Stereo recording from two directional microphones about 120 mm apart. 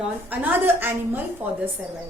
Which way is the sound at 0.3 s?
15° right (ahead or behind).